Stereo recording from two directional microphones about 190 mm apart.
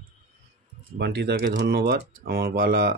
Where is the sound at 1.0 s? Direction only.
60° right (ahead or behind).